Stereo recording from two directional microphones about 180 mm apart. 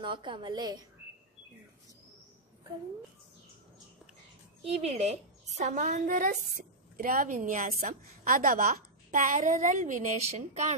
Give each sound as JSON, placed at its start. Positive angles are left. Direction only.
{"t": 0.0, "sound": "a woman's voice", "side_deg": -25}
{"t": 4.6, "sound": "a woman's voice", "side_deg": -35}